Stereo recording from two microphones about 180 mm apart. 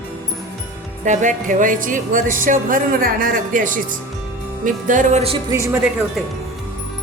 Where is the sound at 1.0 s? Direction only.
40° right (ahead or behind).